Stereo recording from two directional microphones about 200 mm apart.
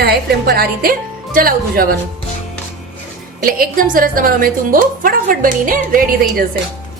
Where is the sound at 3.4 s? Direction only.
45° right (ahead or behind).